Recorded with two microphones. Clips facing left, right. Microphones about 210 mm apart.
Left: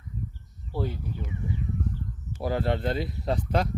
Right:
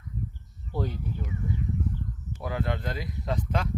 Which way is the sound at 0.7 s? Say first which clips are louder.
Left 1 dB; 5° left (ahead or behind).